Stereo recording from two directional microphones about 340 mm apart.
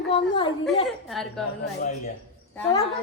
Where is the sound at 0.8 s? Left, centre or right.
Centre.